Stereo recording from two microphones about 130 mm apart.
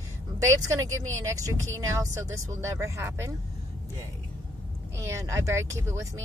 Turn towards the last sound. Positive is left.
turn(degrees=-25)  # may be behind; listen again after turning